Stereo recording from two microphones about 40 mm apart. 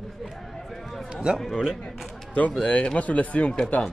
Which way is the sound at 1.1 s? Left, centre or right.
Centre.